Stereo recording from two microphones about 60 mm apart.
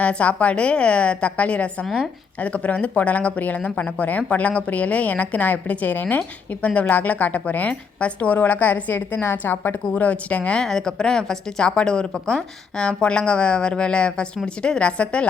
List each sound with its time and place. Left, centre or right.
0.0 s a woman's voice: left
10.6 s a woman's voice: centre